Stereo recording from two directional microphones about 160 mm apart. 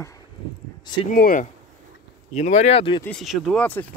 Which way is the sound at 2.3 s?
45° left (ahead or behind).